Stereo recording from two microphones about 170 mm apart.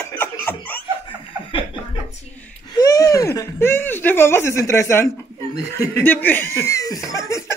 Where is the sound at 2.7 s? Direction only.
20° left (ahead or behind).